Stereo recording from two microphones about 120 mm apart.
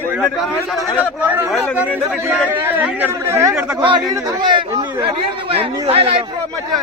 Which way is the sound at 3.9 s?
40° right (ahead or behind).